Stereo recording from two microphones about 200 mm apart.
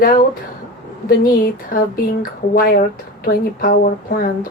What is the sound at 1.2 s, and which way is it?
Speech, 45° left (ahead or behind).